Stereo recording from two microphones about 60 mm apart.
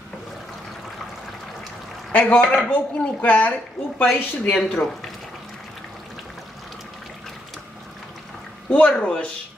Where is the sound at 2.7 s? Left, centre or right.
Left.